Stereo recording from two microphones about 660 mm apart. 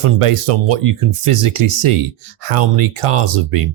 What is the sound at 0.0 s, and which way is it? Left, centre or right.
Speech, right.